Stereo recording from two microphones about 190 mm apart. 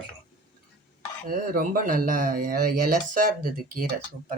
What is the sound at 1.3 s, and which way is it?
Speech, 45° right (ahead or behind).